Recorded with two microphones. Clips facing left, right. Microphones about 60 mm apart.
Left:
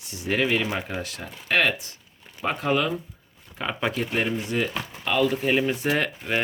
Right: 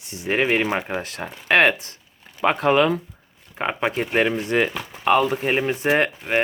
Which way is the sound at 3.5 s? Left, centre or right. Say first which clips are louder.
Right 4 dB; right.